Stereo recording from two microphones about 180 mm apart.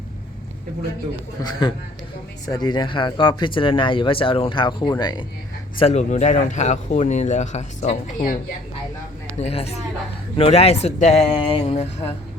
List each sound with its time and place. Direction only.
1.4 s speech: 25° left (ahead or behind)
5.8 s speech: 40° left (ahead or behind)
9.4 s speech: 35° left (ahead or behind)